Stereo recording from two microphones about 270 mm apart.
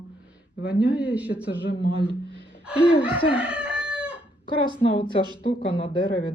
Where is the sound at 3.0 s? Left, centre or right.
Centre.